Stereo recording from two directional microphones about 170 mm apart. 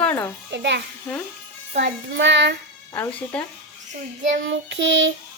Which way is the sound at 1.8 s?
90° right.